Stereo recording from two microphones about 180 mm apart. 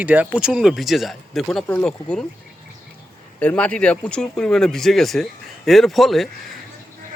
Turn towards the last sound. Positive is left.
turn(degrees=0)  # may be behind; listen again after turning